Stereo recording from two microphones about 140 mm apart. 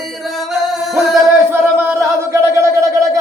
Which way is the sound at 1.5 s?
15° right (ahead or behind).